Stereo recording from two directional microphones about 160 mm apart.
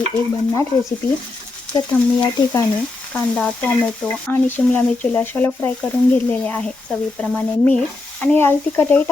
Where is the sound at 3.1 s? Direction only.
10° left (ahead or behind).